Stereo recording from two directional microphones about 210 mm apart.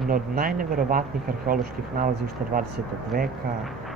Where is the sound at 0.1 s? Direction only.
45° right (ahead or behind).